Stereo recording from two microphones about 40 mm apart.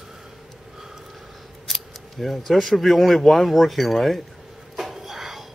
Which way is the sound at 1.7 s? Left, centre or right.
Centre.